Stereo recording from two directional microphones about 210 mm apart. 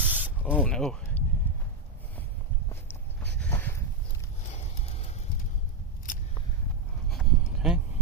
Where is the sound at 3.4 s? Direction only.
10° left (ahead or behind).